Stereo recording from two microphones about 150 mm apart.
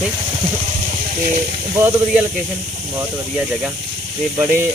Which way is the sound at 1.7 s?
15° right (ahead or behind).